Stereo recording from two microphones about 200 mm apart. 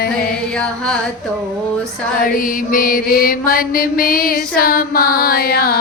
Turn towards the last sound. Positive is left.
turn(degrees=50)  # may be behind; listen again after turning